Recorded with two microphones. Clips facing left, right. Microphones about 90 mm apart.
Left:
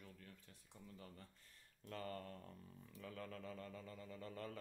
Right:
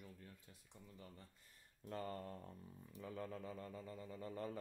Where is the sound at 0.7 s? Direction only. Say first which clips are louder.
Left 1 dB; 5° right (ahead or behind).